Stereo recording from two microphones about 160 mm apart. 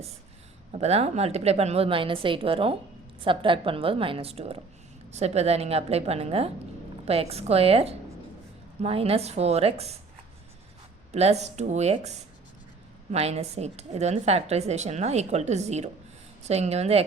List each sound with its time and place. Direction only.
0.8 s a woman's voice: 40° right (ahead or behind)
11.1 s a woman's voice: 40° right (ahead or behind)